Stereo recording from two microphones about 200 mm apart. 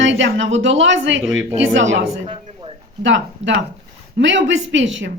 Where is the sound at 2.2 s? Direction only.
25° right (ahead or behind).